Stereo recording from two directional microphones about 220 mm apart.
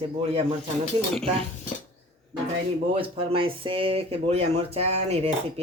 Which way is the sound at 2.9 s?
25° right (ahead or behind).